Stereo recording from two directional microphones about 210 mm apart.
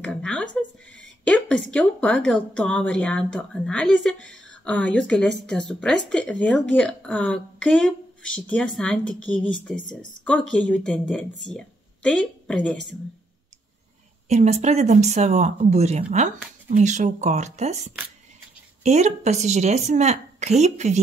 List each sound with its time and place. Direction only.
0.0 s a woman's voice: 5° left (ahead or behind)
14.3 s speech: 30° right (ahead or behind)